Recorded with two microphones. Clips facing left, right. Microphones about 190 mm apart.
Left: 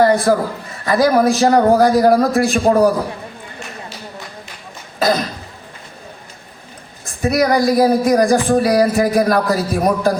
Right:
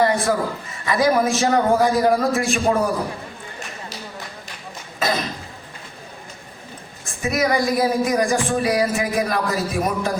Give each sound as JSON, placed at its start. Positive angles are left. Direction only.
{"t": 0.0, "sound": "speech", "side_deg": 35}
{"t": 4.9, "sound": "cough", "side_deg": 35}
{"t": 7.2, "sound": "speech", "side_deg": 35}